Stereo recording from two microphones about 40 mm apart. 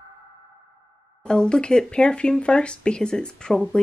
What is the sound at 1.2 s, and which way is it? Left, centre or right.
Speech, left.